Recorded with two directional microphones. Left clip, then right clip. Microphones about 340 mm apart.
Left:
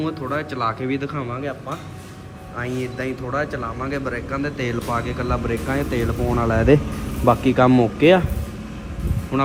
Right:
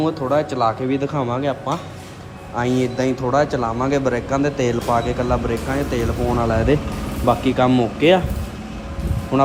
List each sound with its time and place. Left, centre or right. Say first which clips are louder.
0.0 s speech: right 6 dB; centre
2.6 s speech: right 7 dB; centre
9.3 s speech: right 5 dB; centre